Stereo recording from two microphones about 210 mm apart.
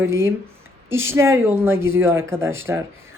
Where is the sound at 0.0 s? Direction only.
10° right (ahead or behind).